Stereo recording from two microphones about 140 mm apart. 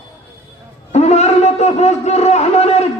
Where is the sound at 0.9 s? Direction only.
50° left (ahead or behind).